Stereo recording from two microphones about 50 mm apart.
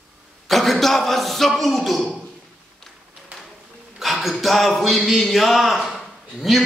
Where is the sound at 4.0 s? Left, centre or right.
Centre.